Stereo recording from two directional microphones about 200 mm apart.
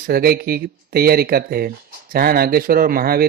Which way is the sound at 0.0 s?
45° right (ahead or behind).